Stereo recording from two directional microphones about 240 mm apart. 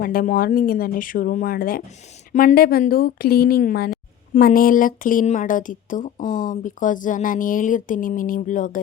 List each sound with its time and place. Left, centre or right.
0.0 s speech: left